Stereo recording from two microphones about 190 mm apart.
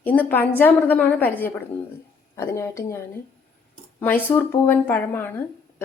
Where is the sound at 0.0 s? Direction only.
10° left (ahead or behind).